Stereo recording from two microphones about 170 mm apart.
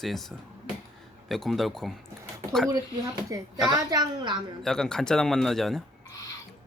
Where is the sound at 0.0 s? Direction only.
Centre (ahead or behind).